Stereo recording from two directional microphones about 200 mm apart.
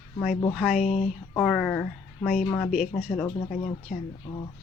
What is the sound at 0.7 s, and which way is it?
Speech, 35° left (ahead or behind).